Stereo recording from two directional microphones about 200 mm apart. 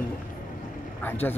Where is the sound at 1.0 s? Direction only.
10° left (ahead or behind).